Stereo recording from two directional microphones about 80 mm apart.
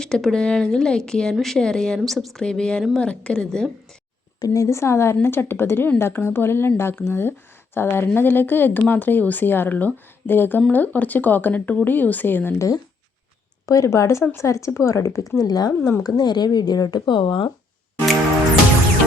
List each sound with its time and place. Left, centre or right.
0.0 s speech: centre
4.4 s speech: left
12.5 s speech: left
15.4 s speech: left